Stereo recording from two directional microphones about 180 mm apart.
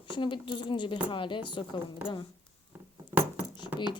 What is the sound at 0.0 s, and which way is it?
Speech, 25° left (ahead or behind).